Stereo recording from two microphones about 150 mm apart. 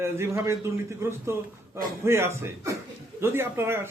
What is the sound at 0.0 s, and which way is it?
A man's voice, 15° right (ahead or behind).